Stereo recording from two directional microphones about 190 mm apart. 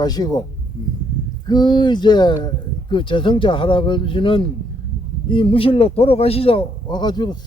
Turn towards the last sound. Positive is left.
turn(degrees=20)  # may be behind; listen again after turning